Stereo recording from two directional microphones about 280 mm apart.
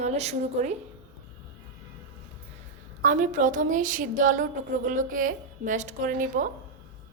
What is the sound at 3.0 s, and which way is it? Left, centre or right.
A woman's voice, right.